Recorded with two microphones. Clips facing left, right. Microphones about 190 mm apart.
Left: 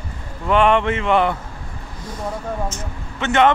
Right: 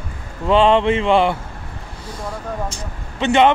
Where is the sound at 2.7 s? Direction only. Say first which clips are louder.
Left 1 dB; 15° right (ahead or behind).